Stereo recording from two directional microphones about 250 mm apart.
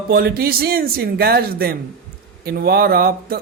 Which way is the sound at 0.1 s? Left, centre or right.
Right.